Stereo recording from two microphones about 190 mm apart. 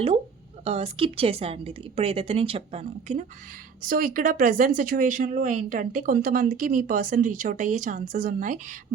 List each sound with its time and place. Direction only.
0.6 s a woman's voice: 30° right (ahead or behind)
3.8 s speech: 45° right (ahead or behind)